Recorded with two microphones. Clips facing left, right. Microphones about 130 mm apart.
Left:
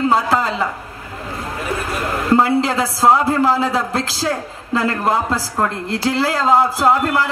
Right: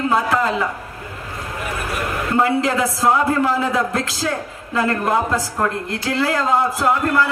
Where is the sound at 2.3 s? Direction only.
30° left (ahead or behind).